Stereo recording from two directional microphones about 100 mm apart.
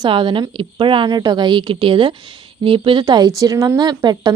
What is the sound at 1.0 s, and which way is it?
A woman's voice, 45° right (ahead or behind).